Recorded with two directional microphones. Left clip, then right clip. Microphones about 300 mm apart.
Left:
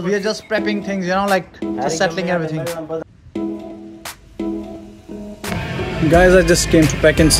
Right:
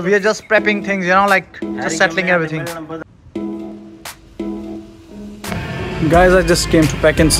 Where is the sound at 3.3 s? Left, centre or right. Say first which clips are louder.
Even; centre.